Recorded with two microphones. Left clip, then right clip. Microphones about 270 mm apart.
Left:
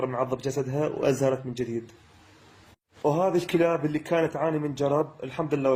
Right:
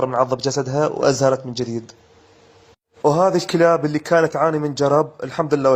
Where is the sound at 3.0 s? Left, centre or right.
Right.